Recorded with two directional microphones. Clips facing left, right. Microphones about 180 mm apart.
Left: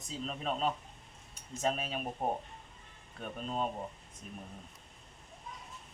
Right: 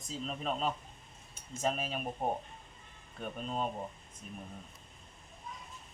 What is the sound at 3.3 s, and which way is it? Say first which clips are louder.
Speech: left 1 dB; centre (ahead or behind).